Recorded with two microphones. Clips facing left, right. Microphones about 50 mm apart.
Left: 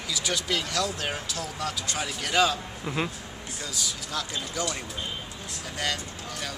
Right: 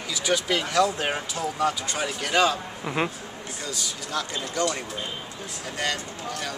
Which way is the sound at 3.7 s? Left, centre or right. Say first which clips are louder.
Right 2 dB; centre.